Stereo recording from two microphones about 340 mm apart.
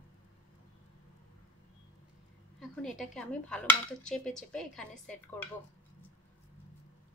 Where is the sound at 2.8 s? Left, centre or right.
Centre.